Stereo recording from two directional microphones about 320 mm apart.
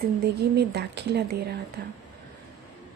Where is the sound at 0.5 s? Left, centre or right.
Right.